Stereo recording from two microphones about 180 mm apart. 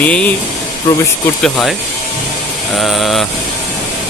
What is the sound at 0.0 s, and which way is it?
Speech, 5° left (ahead or behind).